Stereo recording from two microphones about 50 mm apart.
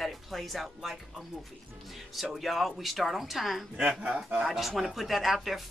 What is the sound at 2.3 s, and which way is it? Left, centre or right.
Speech, centre.